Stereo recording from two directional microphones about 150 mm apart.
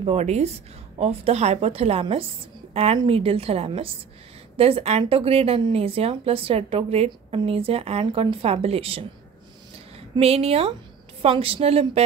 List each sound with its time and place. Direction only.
0.0 s a woman's voice: 45° right (ahead or behind)
10.1 s a woman's voice: 40° right (ahead or behind)